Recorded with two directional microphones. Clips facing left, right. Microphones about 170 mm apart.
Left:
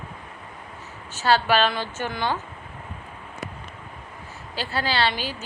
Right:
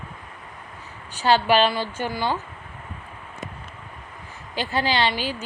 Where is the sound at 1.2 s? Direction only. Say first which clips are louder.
Right 2 dB; 15° right (ahead or behind).